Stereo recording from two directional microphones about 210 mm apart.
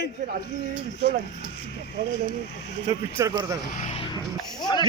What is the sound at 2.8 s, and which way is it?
Speech, 15° right (ahead or behind).